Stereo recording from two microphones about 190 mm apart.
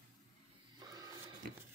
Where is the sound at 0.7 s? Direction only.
20° right (ahead or behind).